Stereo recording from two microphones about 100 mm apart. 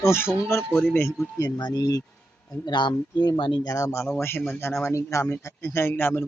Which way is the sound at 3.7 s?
30° left (ahead or behind).